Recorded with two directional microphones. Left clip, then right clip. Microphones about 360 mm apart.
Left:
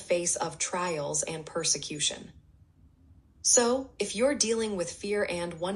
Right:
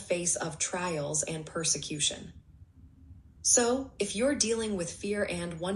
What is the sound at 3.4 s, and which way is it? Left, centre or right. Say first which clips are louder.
A woman's voice: left 2 dB; centre.